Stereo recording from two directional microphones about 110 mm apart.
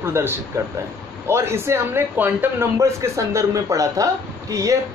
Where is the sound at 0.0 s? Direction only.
20° right (ahead or behind).